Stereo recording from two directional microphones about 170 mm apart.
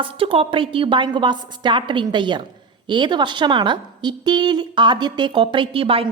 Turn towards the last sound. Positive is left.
turn(degrees=-35)  # may be behind; listen again after turning